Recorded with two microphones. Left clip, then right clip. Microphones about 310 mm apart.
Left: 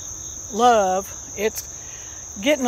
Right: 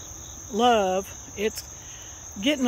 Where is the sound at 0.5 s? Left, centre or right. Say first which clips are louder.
Left 4 dB; centre.